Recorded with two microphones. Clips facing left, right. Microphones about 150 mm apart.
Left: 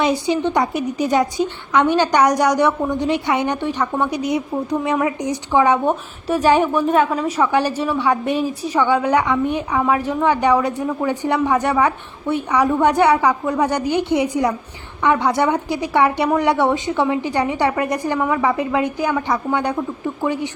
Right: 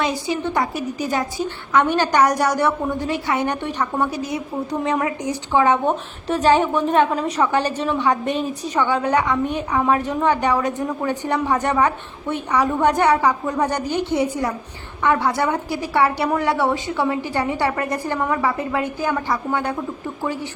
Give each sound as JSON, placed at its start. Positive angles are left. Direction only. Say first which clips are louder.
{"t": 0.1, "sound": "a woman's voice", "louder": "left 4 dB", "side_deg": 25}
{"t": 3.8, "sound": "a woman's voice", "louder": "left 1 dB", "side_deg": -10}
{"t": 4.1, "sound": "a woman's voice", "louder": "left 5 dB", "side_deg": 15}
{"t": 20.2, "sound": "a woman's voice", "louder": "left 4 dB", "side_deg": 15}